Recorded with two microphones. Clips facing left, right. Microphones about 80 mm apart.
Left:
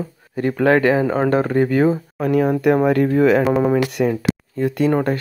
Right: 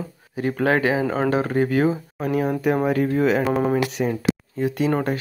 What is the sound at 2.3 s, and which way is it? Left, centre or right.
Speech, left.